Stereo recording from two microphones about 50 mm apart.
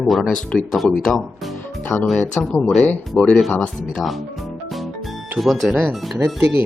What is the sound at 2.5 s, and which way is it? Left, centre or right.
Speech, left.